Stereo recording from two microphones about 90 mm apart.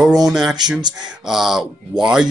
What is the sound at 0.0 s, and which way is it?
Speech, 5° right (ahead or behind).